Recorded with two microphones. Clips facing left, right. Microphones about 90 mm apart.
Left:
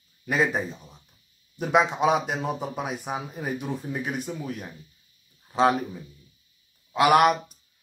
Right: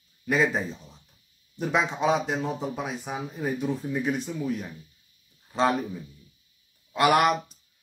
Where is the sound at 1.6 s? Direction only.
5° left (ahead or behind).